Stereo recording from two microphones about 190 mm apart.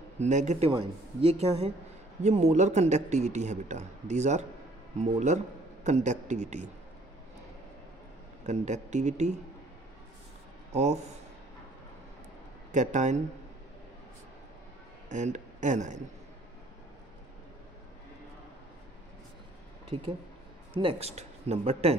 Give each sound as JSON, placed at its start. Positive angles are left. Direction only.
{"t": 0.2, "sound": "speech", "side_deg": -40}
{"t": 8.5, "sound": "speech", "side_deg": -35}
{"t": 10.7, "sound": "speech", "side_deg": -35}
{"t": 12.7, "sound": "speech", "side_deg": -40}
{"t": 15.0, "sound": "speech", "side_deg": -40}
{"t": 20.7, "sound": "speech", "side_deg": -30}